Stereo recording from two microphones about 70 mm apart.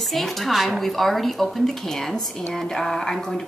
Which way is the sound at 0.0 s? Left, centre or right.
Centre.